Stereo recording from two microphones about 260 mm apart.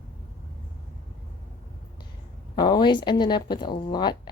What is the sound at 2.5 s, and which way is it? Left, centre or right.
A woman's voice, centre.